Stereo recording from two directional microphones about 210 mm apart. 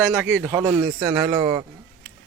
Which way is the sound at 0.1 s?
10° right (ahead or behind).